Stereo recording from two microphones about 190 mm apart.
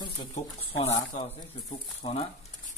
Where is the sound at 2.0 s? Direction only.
25° left (ahead or behind).